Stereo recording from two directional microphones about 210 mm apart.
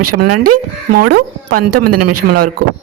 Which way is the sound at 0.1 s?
90° right.